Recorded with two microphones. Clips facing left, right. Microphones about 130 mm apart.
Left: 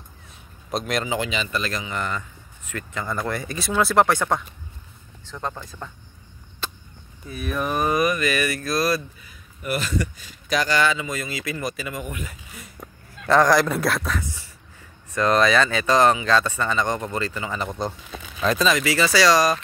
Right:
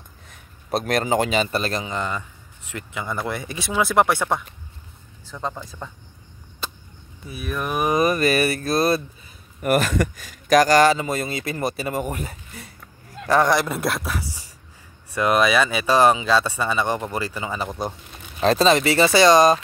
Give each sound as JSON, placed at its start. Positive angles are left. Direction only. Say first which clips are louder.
{"t": 0.7, "sound": "speech", "louder": "right 4 dB", "side_deg": -55}
{"t": 2.7, "sound": "speech", "louder": "even", "side_deg": -10}
{"t": 7.2, "sound": "speech", "louder": "left 1 dB", "side_deg": -5}
{"t": 8.0, "sound": "speech", "louder": "right 3 dB", "side_deg": -35}
{"t": 9.6, "sound": "speech", "louder": "right 6 dB", "side_deg": -50}
{"t": 13.5, "sound": "speech", "louder": "left 2 dB", "side_deg": 0}
{"t": 18.4, "sound": "speech", "louder": "right 4 dB", "side_deg": -30}